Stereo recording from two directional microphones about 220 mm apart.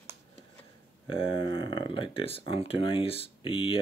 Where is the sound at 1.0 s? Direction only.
25° left (ahead or behind).